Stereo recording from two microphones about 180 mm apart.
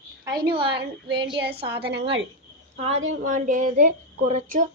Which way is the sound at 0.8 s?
70° right (ahead or behind).